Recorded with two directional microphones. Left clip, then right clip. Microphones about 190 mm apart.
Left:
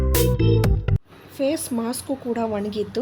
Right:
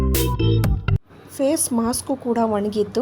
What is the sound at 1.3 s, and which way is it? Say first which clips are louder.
A woman's voice: right 3 dB; 15° right (ahead or behind).